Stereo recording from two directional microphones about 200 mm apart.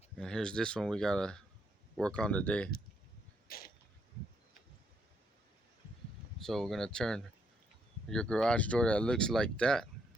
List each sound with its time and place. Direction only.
0.2 s speech: 5° left (ahead or behind)
3.5 s a sound: 50° left (ahead or behind)
6.4 s speech: centre (ahead or behind)